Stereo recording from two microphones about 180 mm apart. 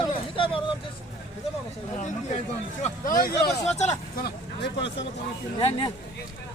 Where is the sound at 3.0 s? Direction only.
50° left (ahead or behind).